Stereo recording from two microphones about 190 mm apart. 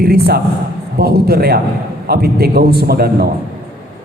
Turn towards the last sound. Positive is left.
turn(degrees=-55)  # may be behind; listen again after turning